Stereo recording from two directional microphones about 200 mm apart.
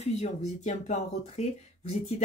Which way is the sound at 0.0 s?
35° left (ahead or behind).